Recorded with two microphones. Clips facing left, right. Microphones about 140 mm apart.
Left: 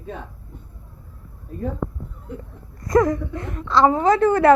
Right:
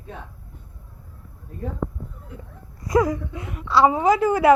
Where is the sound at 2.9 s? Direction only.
5° right (ahead or behind).